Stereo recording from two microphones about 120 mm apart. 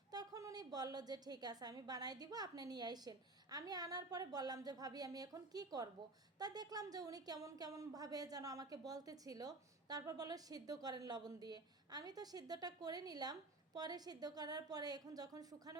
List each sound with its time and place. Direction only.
0.1 s a woman's voice: 30° right (ahead or behind)